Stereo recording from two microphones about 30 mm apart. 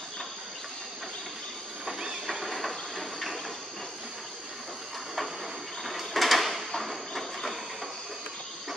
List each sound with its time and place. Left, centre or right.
1.9 s train: right
2.2 s train: centre
5.9 s drawer open or close: centre
6.8 s a sound: centre